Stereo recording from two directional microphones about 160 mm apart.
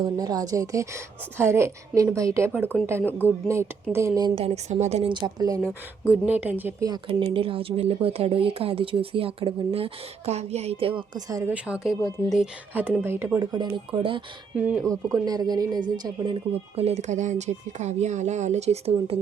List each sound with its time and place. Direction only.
0.0 s a woman's voice: 25° right (ahead or behind)
4.4 s speech: 40° right (ahead or behind)
5.1 s a woman's voice: 25° right (ahead or behind)
6.1 s speech: 10° right (ahead or behind)
7.1 s speech: 35° right (ahead or behind)
11.5 s speech: 5° right (ahead or behind)
13.4 s a woman's voice: 25° right (ahead or behind)
14.5 s speech: 10° right (ahead or behind)
14.8 s a woman's voice: 20° right (ahead or behind); by 19.2 s 40° right (ahead or behind)